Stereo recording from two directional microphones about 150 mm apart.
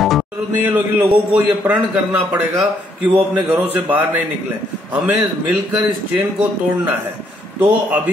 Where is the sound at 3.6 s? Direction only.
10° right (ahead or behind).